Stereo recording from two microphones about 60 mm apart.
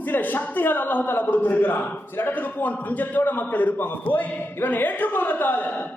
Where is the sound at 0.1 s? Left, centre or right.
Left.